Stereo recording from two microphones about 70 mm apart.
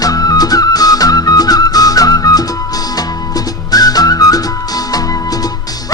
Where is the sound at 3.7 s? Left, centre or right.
Left.